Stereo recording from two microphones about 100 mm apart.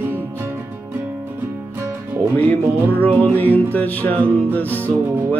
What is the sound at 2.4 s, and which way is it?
Music, 15° left (ahead or behind).